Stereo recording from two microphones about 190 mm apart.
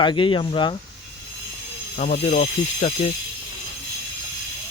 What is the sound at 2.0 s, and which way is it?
Speech, 40° left (ahead or behind).